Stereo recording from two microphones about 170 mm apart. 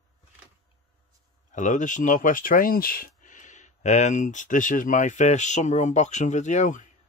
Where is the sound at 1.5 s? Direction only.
45° left (ahead or behind).